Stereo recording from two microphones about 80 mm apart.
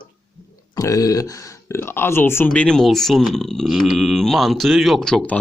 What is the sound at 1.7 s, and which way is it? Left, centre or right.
Speech, left.